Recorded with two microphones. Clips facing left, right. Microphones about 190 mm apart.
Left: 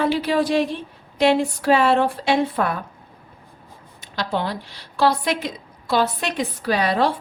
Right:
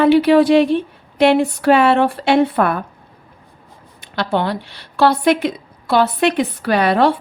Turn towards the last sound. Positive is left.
turn(degrees=-65)  # may be behind; listen again after turning